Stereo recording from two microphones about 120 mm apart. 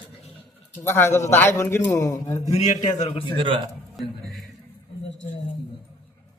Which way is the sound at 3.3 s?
45° right (ahead or behind).